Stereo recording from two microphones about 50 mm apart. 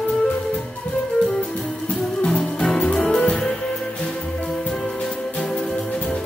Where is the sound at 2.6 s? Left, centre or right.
Centre.